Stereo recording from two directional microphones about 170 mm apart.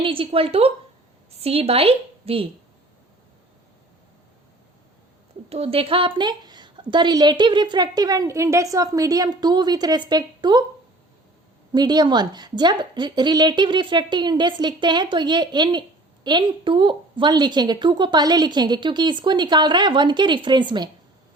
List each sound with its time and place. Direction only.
0.0 s a woman's voice: 30° right (ahead or behind)
5.5 s a woman's voice: 35° right (ahead or behind)
11.7 s a woman's voice: 25° right (ahead or behind)